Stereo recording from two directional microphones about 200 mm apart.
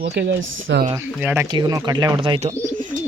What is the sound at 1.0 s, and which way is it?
Speech, 10° right (ahead or behind).